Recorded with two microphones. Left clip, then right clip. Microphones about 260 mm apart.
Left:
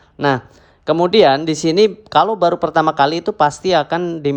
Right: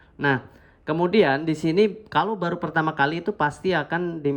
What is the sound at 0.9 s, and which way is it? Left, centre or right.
Speech, centre.